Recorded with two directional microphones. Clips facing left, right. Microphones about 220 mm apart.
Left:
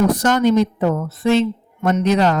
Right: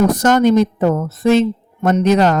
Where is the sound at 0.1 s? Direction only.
45° right (ahead or behind).